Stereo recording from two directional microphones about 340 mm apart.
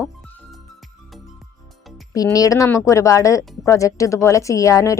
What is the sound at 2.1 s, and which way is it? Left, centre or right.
A woman's voice, centre.